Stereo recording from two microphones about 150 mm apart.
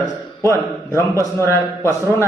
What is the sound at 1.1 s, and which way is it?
Speech, 20° right (ahead or behind).